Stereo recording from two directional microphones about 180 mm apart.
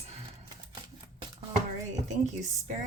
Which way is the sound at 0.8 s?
25° right (ahead or behind).